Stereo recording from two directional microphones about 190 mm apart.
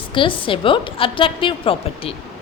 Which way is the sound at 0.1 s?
25° left (ahead or behind).